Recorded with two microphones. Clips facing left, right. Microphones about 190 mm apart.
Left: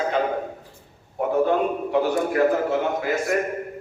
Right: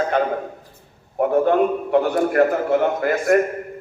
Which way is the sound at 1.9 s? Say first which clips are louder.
Right 2 dB; 55° right (ahead or behind).